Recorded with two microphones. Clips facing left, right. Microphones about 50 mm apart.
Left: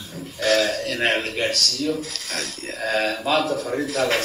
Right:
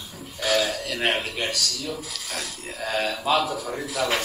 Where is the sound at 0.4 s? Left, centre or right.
Centre.